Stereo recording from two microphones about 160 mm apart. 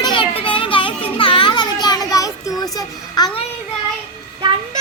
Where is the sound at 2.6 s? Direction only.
25° left (ahead or behind).